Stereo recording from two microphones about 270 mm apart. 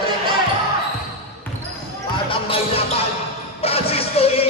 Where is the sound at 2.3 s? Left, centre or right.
Centre.